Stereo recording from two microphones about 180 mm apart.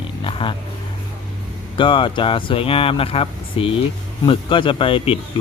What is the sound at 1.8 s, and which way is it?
Speech, 25° left (ahead or behind).